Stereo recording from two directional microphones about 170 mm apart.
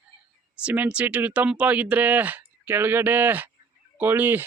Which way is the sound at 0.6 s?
10° right (ahead or behind).